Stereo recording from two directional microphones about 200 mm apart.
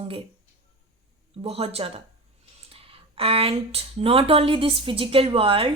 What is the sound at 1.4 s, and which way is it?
Speech, 30° right (ahead or behind).